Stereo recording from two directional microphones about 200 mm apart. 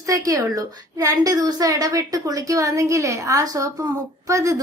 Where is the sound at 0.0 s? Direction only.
15° right (ahead or behind).